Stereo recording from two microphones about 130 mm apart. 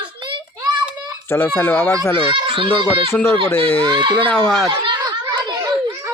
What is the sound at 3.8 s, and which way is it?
Speech, 35° right (ahead or behind).